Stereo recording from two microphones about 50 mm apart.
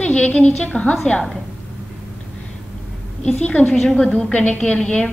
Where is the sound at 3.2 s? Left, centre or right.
Left.